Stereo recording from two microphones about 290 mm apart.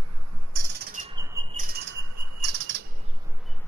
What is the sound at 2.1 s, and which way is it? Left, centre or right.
Bird flight, right.